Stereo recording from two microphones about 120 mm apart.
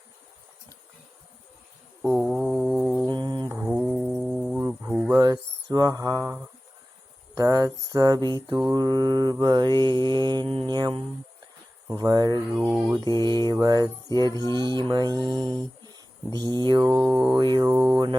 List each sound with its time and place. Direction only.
2.2 s mantra: centre (ahead or behind)
3.1 s mantra: 35° right (ahead or behind)
3.6 s mantra: 10° right (ahead or behind)
4.9 s a sound: 15° right (ahead or behind)
5.1 s speech: 30° right (ahead or behind)
7.3 s mantra: 30° right (ahead or behind); by 10.7 s 50° right (ahead or behind)
10.7 s mantra: 40° right (ahead or behind)
12.5 s speech: 5° right (ahead or behind)
13.1 s mantra: 35° right (ahead or behind)
14.1 s music: 30° left (ahead or behind)
14.3 s mantra: 35° right (ahead or behind)